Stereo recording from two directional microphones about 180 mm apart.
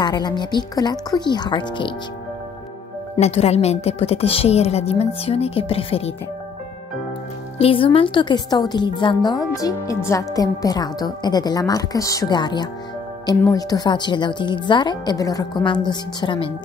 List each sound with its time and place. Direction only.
0.0 s a woman's voice: 25° left (ahead or behind)
3.2 s a woman's voice: 35° left (ahead or behind)
7.5 s a woman's voice: 30° left (ahead or behind)